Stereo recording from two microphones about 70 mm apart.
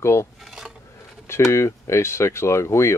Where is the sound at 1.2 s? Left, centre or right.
Left.